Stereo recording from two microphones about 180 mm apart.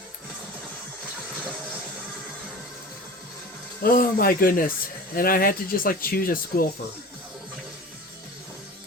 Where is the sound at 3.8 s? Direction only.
55° left (ahead or behind).